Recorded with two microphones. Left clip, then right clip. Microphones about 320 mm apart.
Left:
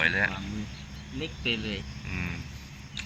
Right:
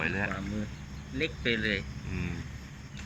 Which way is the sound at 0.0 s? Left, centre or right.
Centre.